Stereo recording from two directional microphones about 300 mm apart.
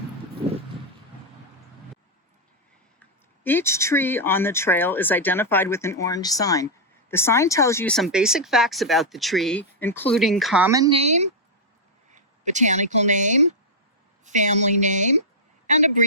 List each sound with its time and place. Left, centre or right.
3.4 s a woman's voice: centre; by 16.0 s right